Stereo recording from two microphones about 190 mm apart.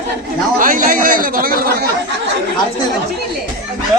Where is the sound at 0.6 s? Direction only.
45° right (ahead or behind).